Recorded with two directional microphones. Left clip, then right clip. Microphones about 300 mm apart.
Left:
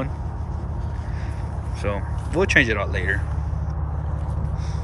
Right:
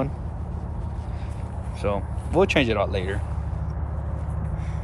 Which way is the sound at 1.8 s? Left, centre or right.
Centre.